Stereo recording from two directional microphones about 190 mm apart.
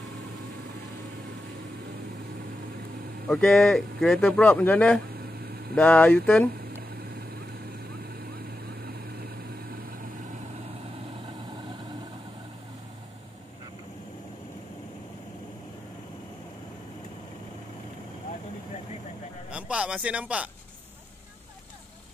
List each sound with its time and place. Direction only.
3.3 s speech: 5° left (ahead or behind)
5.2 s vehicle: 55° right (ahead or behind)
5.8 s speech: 10° left (ahead or behind)
7.9 s vehicle: 55° right (ahead or behind)
19.5 s a sound: 5° right (ahead or behind)